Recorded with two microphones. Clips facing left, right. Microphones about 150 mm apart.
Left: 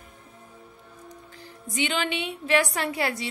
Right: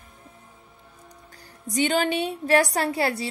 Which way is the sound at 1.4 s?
40° right (ahead or behind).